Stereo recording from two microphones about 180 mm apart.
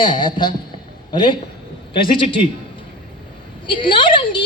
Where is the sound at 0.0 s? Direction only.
25° left (ahead or behind).